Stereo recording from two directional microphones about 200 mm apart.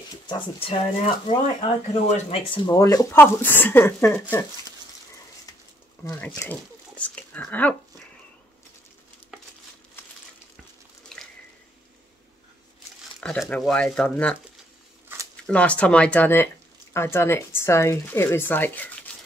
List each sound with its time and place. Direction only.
0.3 s speech: 30° left (ahead or behind); by 4.5 s 10° left (ahead or behind)
6.0 s speech: 10° left (ahead or behind)
11.1 s drip: 5° left (ahead or behind)
13.2 s speech: 5° left (ahead or behind)
15.4 s speech: 5° left (ahead or behind)